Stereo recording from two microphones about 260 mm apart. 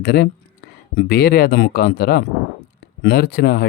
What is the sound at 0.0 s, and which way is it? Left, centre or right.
Speech, left.